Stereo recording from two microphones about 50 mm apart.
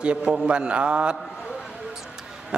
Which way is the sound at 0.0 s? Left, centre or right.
Right.